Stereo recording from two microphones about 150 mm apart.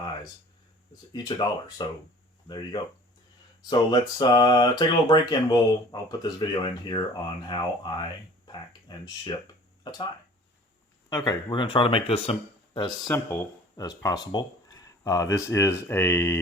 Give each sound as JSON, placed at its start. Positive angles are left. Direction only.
{"t": 1.1, "sound": "speech", "side_deg": 25}
{"t": 11.1, "sound": "speech", "side_deg": 25}
{"t": 12.7, "sound": "speech", "side_deg": 25}